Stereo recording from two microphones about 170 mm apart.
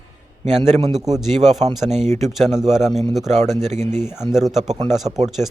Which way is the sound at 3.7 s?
45° right (ahead or behind).